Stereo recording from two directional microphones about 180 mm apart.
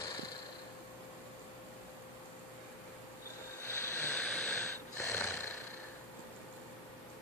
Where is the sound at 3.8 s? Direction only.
10° left (ahead or behind).